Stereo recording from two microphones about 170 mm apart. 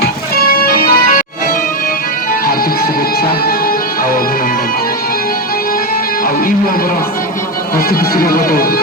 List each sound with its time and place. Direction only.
0.6 s music: 60° left (ahead or behind)
7.9 s speech: 60° left (ahead or behind)